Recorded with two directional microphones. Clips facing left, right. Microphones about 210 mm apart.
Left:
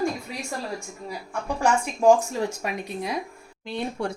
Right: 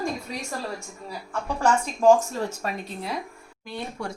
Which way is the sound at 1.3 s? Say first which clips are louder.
Even; 10° left (ahead or behind).